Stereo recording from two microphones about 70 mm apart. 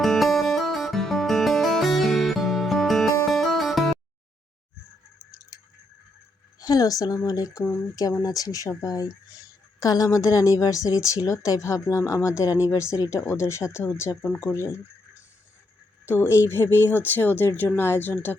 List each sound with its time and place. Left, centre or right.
0.0 s music: centre
6.6 s a woman's voice: left
16.0 s speech: left